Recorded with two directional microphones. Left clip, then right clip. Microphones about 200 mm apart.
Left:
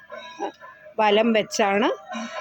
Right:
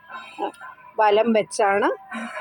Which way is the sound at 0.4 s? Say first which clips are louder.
Right 3 dB; 10° right (ahead or behind).